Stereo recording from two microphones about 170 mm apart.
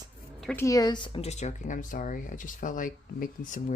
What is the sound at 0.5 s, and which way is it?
Speech, 20° left (ahead or behind).